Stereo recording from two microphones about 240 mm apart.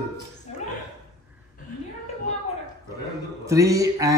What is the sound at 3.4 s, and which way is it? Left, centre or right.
Speech, centre.